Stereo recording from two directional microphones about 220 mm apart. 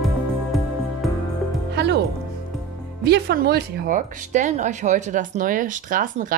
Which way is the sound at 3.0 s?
45° right (ahead or behind).